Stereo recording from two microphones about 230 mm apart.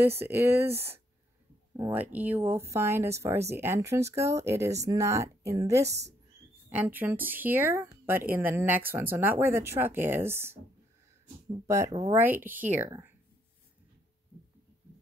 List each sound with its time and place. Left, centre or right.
0.0 s speech: centre
11.6 s speech: centre